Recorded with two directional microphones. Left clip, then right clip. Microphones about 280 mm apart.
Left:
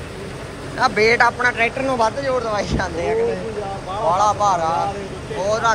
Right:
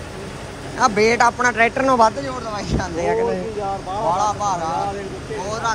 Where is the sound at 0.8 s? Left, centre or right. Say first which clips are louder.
Even; right.